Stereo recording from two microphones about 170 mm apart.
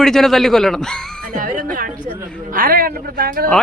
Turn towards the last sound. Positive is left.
turn(degrees=-60)  # may be behind; listen again after turning